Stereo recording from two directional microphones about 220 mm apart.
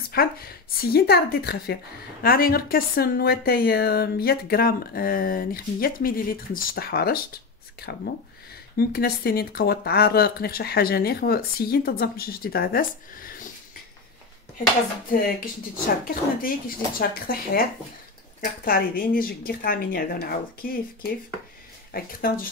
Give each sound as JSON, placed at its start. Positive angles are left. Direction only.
{"t": 0.1, "sound": "a woman's voice", "side_deg": 45}
{"t": 15.0, "sound": "a woman's voice", "side_deg": 40}